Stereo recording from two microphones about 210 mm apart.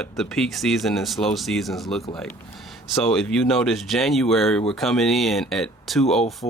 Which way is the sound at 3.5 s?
Centre (ahead or behind).